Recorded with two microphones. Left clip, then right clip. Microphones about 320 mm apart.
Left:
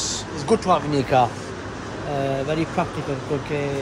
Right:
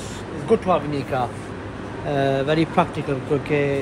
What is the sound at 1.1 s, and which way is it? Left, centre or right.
Speech, left.